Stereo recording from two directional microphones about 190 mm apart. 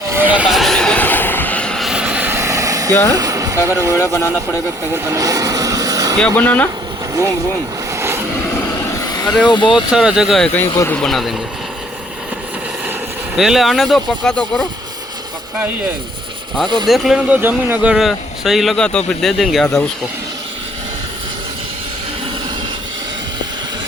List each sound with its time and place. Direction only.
0.1 s vehicle: 10° right (ahead or behind)
3.1 s speech: 20° right (ahead or behind)
3.9 s speech: 15° left (ahead or behind)
5.0 s vehicle: 20° right (ahead or behind)
6.1 s speech: 5° left (ahead or behind)
7.9 s vehicle: 15° right (ahead or behind)
9.0 s vehicle: 20° left (ahead or behind)
9.5 s speech: 25° left (ahead or behind)
9.9 s speech: 5° right (ahead or behind)
10.7 s speech: 15° left (ahead or behind)
10.9 s speech: centre (ahead or behind)
13.3 s speech: centre (ahead or behind)
16.8 s speech: centre (ahead or behind)